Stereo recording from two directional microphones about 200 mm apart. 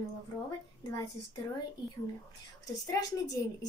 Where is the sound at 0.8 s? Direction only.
20° left (ahead or behind).